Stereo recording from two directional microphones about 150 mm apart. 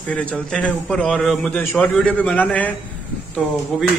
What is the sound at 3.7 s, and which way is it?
Speech, centre (ahead or behind).